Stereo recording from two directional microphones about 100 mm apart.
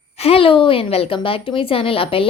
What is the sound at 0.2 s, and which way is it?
A woman's voice, 75° left (ahead or behind).